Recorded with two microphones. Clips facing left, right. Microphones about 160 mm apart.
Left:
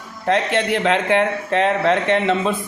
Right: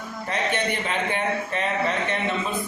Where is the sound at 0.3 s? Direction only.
90° left.